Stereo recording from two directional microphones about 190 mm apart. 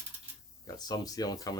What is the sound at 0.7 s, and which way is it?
Speech, 20° left (ahead or behind).